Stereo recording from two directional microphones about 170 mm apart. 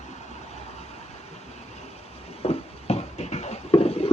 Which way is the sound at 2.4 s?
40° left (ahead or behind).